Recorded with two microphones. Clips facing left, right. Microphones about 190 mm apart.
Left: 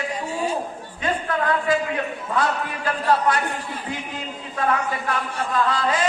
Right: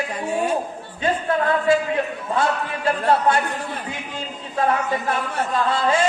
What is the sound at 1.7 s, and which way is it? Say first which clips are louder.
Speech: right 3 dB; 25° right (ahead or behind).